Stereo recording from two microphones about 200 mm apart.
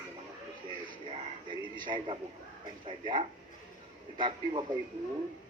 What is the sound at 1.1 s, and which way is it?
Frog, 25° right (ahead or behind).